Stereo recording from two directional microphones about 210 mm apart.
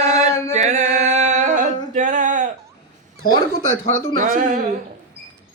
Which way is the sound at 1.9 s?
35° right (ahead or behind).